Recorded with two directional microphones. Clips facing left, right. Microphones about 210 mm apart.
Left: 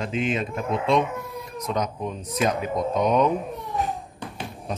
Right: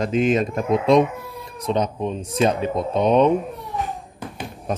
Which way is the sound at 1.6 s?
30° right (ahead or behind).